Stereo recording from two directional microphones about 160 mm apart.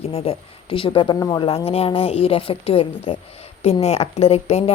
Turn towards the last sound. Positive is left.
turn(degrees=40)  # may be behind; listen again after turning